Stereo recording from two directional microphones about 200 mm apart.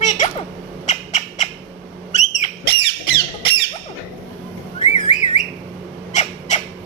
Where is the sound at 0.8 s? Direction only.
35° left (ahead or behind).